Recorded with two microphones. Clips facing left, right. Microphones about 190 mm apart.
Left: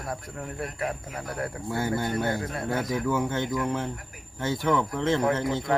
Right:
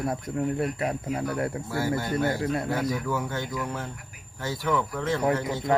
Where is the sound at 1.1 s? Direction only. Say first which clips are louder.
Right 5 dB; 25° right (ahead or behind).